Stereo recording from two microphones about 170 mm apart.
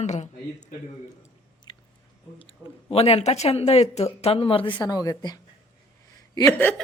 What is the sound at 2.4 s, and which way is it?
A woman's voice, 35° left (ahead or behind).